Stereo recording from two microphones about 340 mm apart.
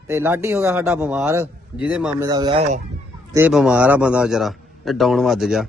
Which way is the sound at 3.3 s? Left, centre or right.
Centre.